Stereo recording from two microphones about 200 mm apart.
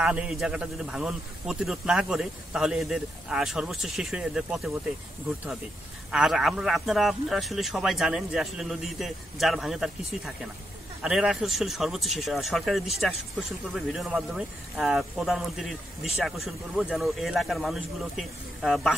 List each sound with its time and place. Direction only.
0.0 s a man's voice: 5° right (ahead or behind)
6.1 s a man's voice: centre (ahead or behind)